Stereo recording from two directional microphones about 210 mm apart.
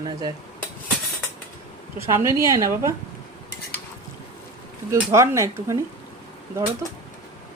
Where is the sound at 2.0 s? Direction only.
15° right (ahead or behind).